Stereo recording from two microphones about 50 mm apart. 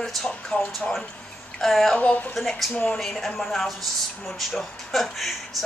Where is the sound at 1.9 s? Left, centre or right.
Left.